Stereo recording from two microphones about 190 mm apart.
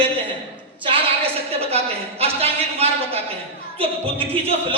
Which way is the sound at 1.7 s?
30° right (ahead or behind).